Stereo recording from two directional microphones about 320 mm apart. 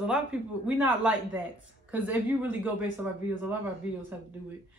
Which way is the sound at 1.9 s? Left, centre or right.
Centre.